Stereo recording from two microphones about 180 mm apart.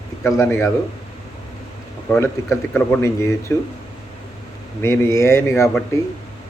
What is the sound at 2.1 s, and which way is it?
Speech, 15° left (ahead or behind).